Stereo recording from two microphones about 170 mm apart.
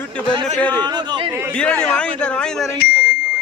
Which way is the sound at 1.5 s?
5° left (ahead or behind).